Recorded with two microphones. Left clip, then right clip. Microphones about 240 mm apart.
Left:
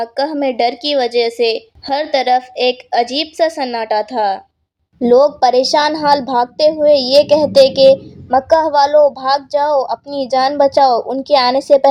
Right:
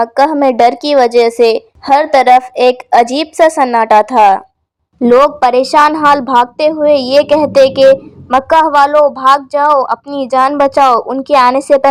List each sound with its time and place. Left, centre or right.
0.0 s a woman's voice: right